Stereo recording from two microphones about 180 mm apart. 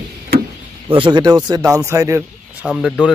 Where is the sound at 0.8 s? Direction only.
30° right (ahead or behind).